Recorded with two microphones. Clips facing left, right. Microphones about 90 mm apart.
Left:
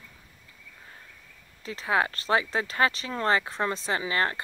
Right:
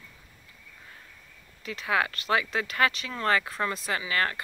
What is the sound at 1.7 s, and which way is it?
Speech, 30° left (ahead or behind).